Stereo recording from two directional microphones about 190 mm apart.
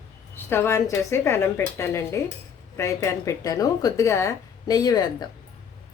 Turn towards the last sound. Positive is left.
turn(degrees=20)  # may be behind; listen again after turning